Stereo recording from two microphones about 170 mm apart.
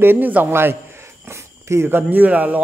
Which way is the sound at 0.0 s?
10° right (ahead or behind).